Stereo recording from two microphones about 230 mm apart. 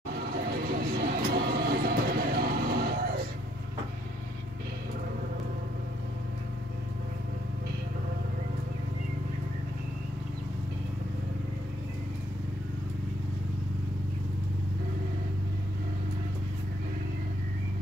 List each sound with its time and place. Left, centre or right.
0.1 s vehicle: right